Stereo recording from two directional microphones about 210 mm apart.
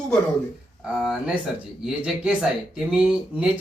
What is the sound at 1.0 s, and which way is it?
Speech, centre (ahead or behind).